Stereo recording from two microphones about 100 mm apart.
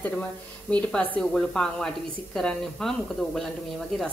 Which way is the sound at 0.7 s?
15° left (ahead or behind).